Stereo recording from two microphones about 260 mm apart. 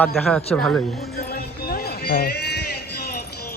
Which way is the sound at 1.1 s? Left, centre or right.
Left.